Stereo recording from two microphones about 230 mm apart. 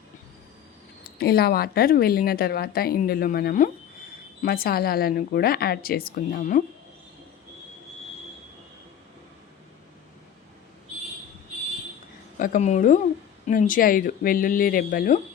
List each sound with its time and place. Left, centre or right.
1.2 s speech: left
12.4 s speech: left